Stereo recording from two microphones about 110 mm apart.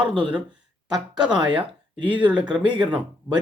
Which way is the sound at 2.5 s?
45° right (ahead or behind).